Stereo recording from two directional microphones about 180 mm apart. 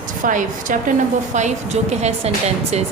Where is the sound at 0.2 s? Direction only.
45° right (ahead or behind).